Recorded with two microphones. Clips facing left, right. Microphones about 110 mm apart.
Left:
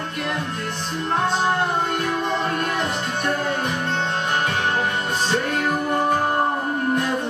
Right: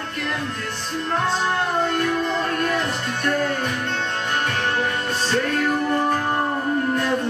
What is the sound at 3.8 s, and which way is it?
Music, 30° left (ahead or behind).